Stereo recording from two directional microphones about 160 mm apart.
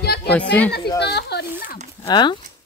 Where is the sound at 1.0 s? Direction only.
90° left.